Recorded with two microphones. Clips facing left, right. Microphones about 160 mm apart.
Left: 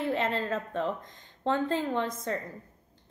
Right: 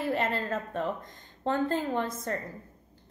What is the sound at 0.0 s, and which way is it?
A woman's voice, 5° right (ahead or behind).